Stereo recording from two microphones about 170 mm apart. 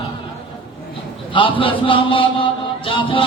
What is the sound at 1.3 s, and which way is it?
A man's voice, 30° left (ahead or behind).